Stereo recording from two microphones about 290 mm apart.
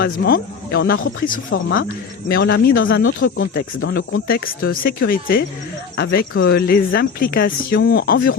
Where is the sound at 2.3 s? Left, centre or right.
Left.